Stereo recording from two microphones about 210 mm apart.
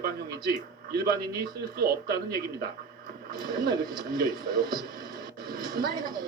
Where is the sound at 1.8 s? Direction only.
45° right (ahead or behind).